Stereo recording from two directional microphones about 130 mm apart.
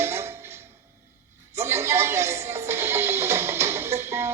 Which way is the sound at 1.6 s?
20° right (ahead or behind).